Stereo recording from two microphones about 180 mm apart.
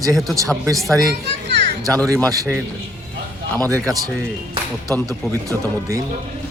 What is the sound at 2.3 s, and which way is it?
Speech, 20° right (ahead or behind).